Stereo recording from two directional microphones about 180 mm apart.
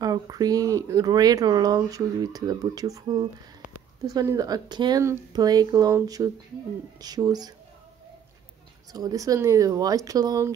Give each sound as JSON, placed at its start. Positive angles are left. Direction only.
{"t": 0.0, "sound": "speech", "side_deg": -20}
{"t": 8.9, "sound": "speech", "side_deg": -20}